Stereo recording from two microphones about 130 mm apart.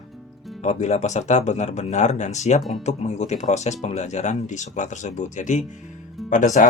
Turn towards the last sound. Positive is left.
turn(degrees=75)  # may be behind; listen again after turning